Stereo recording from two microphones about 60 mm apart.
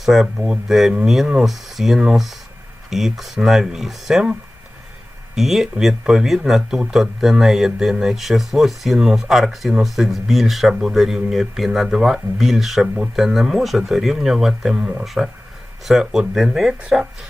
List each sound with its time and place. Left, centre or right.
0.0 s speech: centre
5.3 s speech: centre